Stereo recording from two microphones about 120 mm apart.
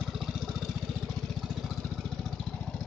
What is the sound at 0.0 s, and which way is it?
Vehicle, 5° right (ahead or behind).